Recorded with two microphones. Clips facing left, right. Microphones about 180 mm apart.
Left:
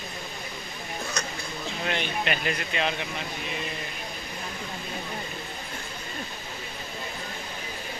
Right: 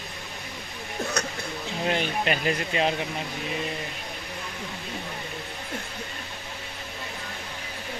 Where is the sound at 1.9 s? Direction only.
35° right (ahead or behind).